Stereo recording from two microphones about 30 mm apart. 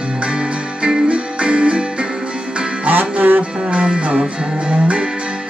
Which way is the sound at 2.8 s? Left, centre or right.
Right.